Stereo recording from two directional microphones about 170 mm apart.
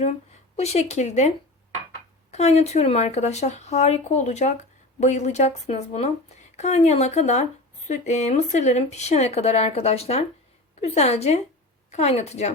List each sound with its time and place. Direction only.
0.5 s speech: 40° left (ahead or behind)
2.3 s speech: 40° left (ahead or behind)